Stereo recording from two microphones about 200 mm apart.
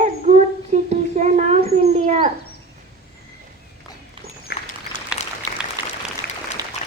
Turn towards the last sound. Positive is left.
turn(degrees=-5)  # may be behind; listen again after turning